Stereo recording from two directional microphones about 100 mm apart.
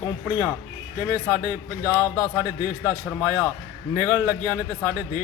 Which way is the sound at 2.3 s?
25° right (ahead or behind).